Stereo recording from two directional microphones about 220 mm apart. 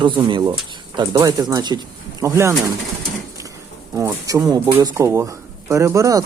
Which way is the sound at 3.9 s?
15° right (ahead or behind).